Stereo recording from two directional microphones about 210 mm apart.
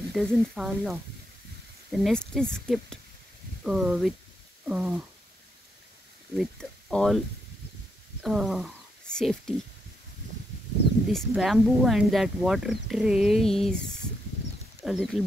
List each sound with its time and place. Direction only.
0.1 s speech: centre (ahead or behind)
6.3 s speech: 5° left (ahead or behind)
8.2 s speech: centre (ahead or behind)
11.1 s speech: centre (ahead or behind)